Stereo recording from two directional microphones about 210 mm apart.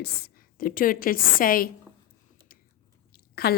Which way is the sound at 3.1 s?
45° left (ahead or behind).